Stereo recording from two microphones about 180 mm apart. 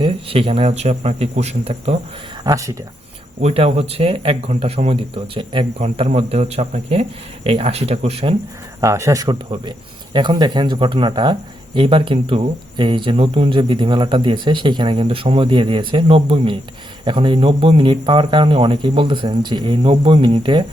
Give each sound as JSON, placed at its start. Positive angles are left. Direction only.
{"t": 0.0, "sound": "speech", "side_deg": -30}
{"t": 2.4, "sound": "speech", "side_deg": -20}
{"t": 3.4, "sound": "speech", "side_deg": -35}
{"t": 8.8, "sound": "speech", "side_deg": -15}